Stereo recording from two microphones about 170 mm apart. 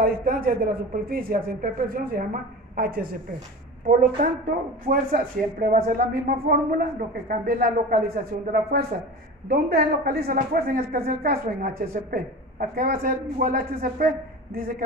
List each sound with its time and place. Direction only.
0.0 s a woman's voice: 60° right (ahead or behind)